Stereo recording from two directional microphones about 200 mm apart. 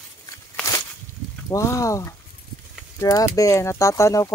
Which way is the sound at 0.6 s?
15° left (ahead or behind).